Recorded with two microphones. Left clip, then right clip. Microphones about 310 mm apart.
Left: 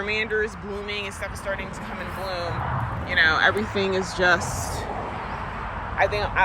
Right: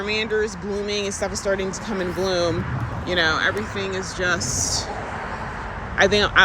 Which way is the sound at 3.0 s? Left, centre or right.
Centre.